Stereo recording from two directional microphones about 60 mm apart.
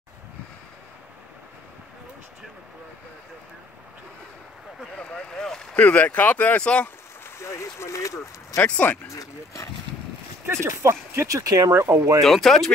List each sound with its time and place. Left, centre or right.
4.9 s a sound: centre
5.8 s speech: left
7.2 s speech: left
8.6 s speech: left
9.0 s speech: left
10.5 s speech: right
11.2 s speech: right
11.7 s speech: right
12.2 s speech: centre